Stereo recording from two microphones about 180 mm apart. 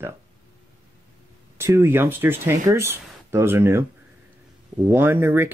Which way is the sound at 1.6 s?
15° right (ahead or behind).